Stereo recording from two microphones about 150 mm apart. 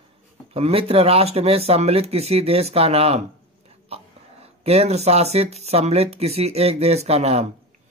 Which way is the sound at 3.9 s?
40° right (ahead or behind).